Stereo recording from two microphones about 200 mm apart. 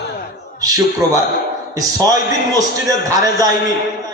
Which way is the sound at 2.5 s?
20° right (ahead or behind).